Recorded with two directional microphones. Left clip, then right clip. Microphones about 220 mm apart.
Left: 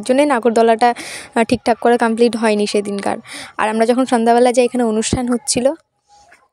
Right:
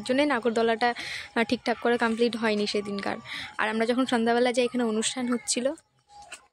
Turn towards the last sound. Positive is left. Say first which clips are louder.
# left 11 dB
turn(degrees=30)  # may be behind; listen again after turning